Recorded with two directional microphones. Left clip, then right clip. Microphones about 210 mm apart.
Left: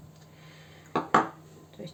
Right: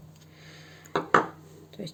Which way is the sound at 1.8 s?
50° right (ahead or behind).